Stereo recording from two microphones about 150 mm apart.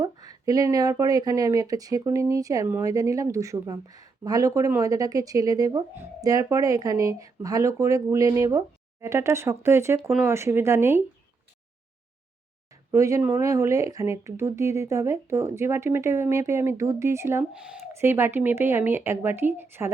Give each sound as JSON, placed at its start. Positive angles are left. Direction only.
{"t": 0.0, "sound": "speech", "side_deg": -25}
{"t": 12.9, "sound": "speech", "side_deg": -20}
{"t": 17.5, "sound": "speech", "side_deg": -5}